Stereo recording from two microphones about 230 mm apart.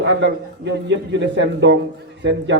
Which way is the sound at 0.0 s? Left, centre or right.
Right.